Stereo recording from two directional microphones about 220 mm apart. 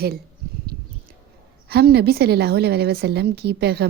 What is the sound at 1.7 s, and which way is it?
A woman's voice, 45° right (ahead or behind).